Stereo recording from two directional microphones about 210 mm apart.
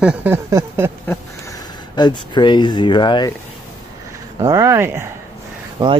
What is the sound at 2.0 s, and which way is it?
Speech, 20° left (ahead or behind).